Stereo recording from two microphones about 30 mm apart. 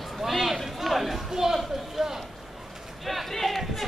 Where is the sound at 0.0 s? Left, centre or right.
Centre.